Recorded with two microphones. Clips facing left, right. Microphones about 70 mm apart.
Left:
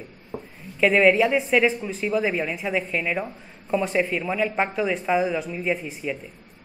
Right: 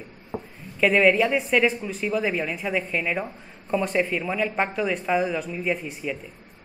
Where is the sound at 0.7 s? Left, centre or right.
Centre.